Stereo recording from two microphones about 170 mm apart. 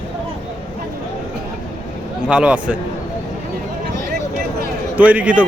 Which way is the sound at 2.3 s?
5° right (ahead or behind).